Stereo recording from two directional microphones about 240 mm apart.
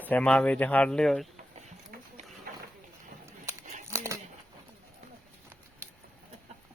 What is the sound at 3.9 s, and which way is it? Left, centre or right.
Crumpling, centre.